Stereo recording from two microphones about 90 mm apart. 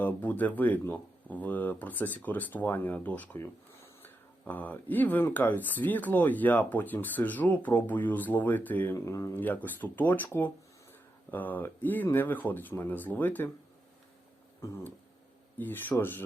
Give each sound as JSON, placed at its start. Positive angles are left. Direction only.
{"t": 0.0, "sound": "speech", "side_deg": 20}
{"t": 9.0, "sound": "speech", "side_deg": 35}
{"t": 9.3, "sound": "speech", "side_deg": 20}
{"t": 14.6, "sound": "speech", "side_deg": 30}